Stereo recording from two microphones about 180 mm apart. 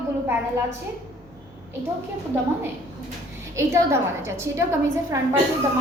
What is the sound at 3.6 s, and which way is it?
A woman's voice, 15° right (ahead or behind).